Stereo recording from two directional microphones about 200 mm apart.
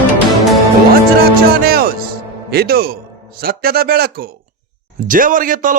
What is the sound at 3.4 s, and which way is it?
A man's voice, 50° right (ahead or behind).